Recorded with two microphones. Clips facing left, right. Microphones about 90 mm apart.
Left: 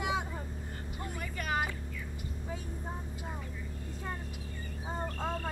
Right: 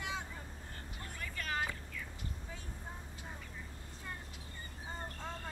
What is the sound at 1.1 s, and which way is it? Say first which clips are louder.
Vehicle: left 5 dB; 15° left (ahead or behind).